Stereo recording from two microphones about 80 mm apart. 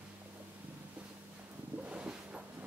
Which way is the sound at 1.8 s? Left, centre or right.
Centre.